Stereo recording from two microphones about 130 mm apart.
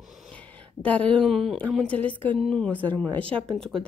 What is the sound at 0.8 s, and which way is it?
Speech, 10° left (ahead or behind).